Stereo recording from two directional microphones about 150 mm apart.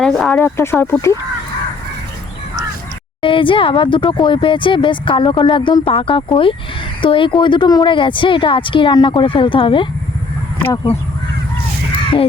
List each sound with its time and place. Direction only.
0.0 s speech: 5° left (ahead or behind)
0.3 s speech: 15° left (ahead or behind)
3.2 s speech: 35° left (ahead or behind)